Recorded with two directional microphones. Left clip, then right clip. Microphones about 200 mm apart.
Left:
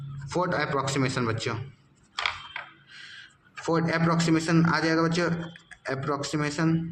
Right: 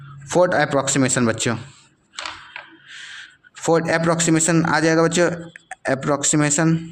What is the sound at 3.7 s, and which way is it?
Speech, 45° right (ahead or behind).